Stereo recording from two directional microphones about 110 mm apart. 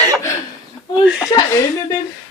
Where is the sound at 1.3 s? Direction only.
25° left (ahead or behind).